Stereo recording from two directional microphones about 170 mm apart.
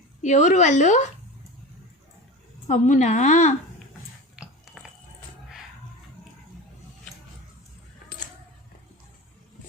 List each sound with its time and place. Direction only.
0.2 s speech: 45° left (ahead or behind)
2.6 s speech: 45° left (ahead or behind)
4.4 s a sound: 5° right (ahead or behind)